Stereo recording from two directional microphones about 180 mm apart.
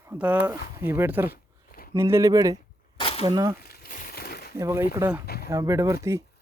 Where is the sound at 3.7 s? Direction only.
50° left (ahead or behind).